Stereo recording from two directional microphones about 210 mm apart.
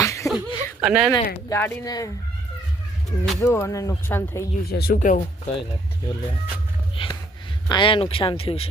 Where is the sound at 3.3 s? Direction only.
10° left (ahead or behind).